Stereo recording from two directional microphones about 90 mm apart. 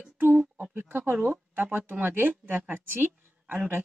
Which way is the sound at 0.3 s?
10° right (ahead or behind).